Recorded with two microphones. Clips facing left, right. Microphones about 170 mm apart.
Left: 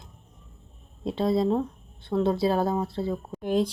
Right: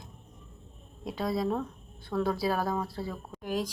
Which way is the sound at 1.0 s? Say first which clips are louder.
Left 6 dB; 25° left (ahead or behind).